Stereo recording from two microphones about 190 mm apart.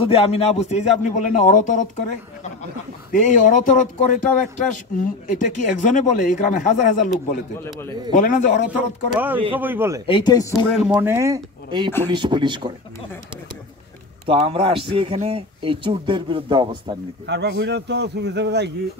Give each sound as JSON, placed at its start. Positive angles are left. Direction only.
{"t": 0.0, "sound": "a man's voice", "side_deg": 30}
{"t": 8.1, "sound": "a man's voice", "side_deg": 40}
{"t": 8.7, "sound": "speech", "side_deg": -10}
{"t": 10.0, "sound": "speech", "side_deg": 25}
{"t": 11.0, "sound": "a man's voice", "side_deg": -15}
{"t": 14.2, "sound": "a man's voice", "side_deg": -30}
{"t": 17.3, "sound": "a man's voice", "side_deg": -65}